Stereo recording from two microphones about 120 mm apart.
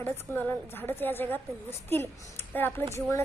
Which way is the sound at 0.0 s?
15° left (ahead or behind).